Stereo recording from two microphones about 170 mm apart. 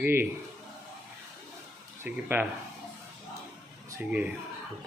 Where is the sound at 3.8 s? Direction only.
15° right (ahead or behind).